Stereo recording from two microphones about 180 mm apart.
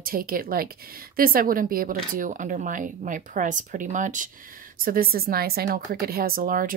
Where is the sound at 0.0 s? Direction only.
55° right (ahead or behind).